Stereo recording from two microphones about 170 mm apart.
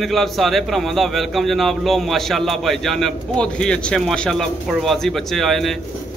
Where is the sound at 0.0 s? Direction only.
Centre (ahead or behind).